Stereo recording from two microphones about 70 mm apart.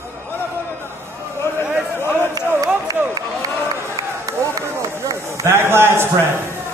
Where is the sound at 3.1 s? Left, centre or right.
Right.